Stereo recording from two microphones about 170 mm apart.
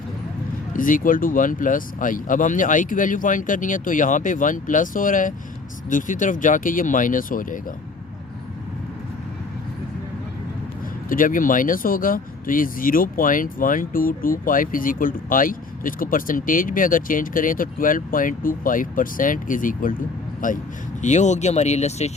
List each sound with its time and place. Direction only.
0.7 s speech: 50° left (ahead or behind)
11.1 s speech: 50° left (ahead or behind)